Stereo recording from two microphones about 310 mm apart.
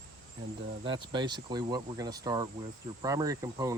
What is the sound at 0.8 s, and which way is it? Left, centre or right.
Speech, centre.